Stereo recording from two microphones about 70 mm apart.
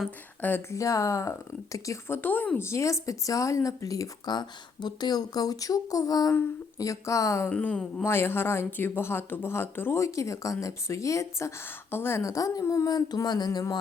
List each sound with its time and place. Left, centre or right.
0.7 s speech: left
2.0 s speech: left
2.6 s speech: left
4.3 s speech: left
6.7 s speech: left
7.5 s speech: centre
8.0 s speech: left
10.0 s speech: left
12.2 s speech: left
13.2 s a sound: left